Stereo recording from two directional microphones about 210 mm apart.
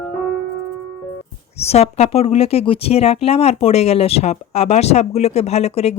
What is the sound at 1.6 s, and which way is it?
Speech, 30° left (ahead or behind).